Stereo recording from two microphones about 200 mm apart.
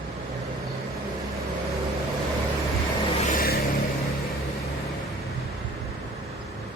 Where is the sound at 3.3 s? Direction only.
45° left (ahead or behind).